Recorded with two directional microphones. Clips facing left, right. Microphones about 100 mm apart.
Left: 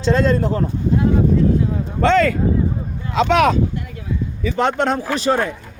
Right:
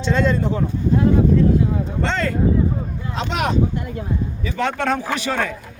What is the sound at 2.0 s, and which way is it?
Speech, 60° left (ahead or behind).